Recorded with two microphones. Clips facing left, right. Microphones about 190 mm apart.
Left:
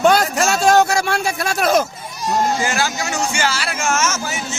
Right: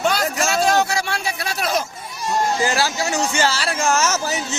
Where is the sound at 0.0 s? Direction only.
50° left (ahead or behind).